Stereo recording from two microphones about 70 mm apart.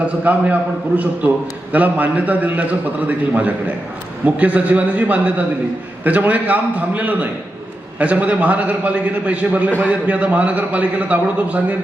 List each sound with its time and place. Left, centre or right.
0.0 s a man's voice: right